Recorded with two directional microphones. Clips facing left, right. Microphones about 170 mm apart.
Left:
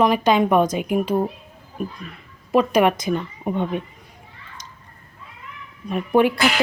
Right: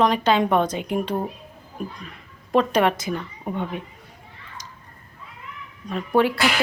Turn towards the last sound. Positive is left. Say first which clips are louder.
# left 3 dB
turn(degrees=15)  # may be behind; listen again after turning